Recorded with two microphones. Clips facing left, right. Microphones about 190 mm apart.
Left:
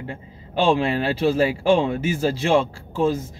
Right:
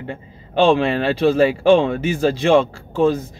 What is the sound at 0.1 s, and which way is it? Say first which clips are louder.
Speech: right 7 dB; 5° left (ahead or behind).